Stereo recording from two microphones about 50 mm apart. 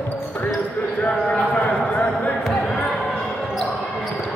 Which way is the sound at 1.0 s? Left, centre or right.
Left.